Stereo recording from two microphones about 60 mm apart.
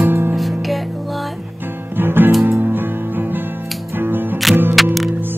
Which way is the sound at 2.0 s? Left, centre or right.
Right.